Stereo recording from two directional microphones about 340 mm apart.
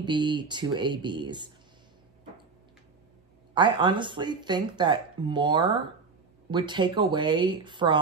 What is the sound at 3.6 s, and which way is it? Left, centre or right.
Speech, centre.